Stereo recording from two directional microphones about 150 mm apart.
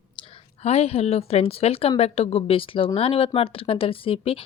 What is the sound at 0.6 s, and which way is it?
A woman's voice, 45° left (ahead or behind).